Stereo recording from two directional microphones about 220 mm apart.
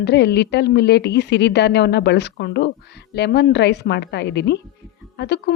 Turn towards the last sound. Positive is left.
turn(degrees=50)  # may be behind; listen again after turning